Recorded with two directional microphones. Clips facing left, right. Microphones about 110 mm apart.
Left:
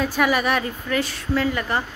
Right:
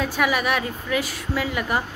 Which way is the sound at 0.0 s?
Centre (ahead or behind).